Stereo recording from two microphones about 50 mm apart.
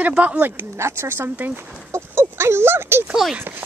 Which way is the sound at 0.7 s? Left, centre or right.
Right.